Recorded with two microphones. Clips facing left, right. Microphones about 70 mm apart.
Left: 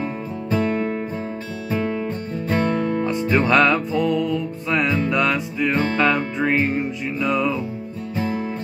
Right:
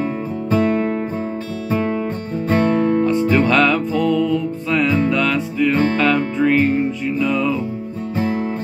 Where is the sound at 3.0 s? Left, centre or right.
Centre.